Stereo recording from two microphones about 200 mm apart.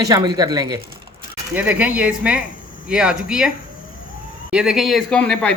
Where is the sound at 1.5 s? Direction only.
5° right (ahead or behind).